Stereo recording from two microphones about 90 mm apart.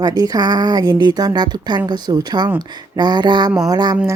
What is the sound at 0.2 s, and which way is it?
Speech, 50° right (ahead or behind).